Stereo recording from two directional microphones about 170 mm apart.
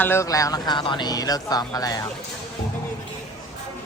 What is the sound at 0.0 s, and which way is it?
Speech, 15° left (ahead or behind).